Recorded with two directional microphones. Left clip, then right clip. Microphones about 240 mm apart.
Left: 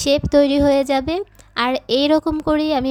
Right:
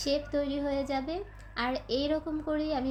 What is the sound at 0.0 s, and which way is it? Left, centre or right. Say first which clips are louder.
A woman's voice: left 15 dB; left.